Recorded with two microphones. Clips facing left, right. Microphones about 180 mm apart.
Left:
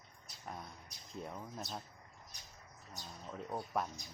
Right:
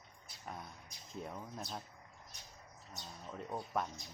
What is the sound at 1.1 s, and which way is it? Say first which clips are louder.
Speech: even; centre (ahead or behind).